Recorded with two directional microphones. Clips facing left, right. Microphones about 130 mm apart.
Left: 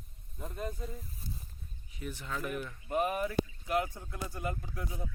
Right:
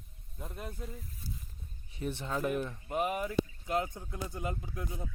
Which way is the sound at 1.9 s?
30° right (ahead or behind).